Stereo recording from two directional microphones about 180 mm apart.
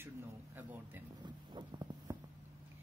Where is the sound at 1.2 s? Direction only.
25° right (ahead or behind).